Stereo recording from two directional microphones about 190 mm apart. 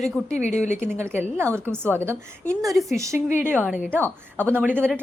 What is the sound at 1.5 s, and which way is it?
A woman's voice, 10° left (ahead or behind).